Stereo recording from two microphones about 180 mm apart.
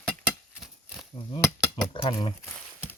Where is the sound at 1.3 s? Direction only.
15° left (ahead or behind).